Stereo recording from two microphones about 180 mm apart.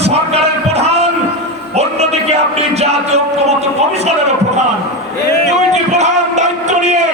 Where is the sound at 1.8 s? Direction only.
35° right (ahead or behind).